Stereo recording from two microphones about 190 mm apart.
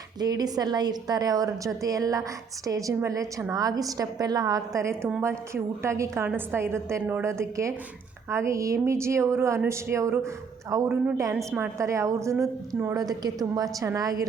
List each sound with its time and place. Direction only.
0.2 s a woman's voice: 20° right (ahead or behind)